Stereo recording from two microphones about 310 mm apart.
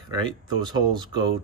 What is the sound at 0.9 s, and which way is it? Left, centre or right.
Speech, centre.